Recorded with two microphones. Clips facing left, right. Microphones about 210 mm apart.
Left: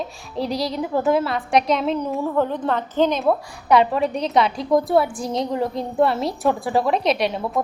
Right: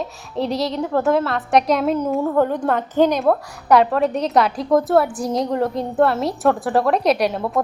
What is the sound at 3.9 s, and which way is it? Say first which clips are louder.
A woman's voice: right 2 dB; centre (ahead or behind).